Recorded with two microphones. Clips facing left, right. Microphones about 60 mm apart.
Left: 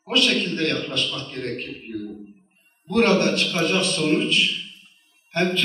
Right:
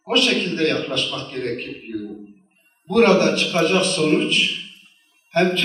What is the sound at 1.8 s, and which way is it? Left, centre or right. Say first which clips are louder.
Speech: right 2 dB; right.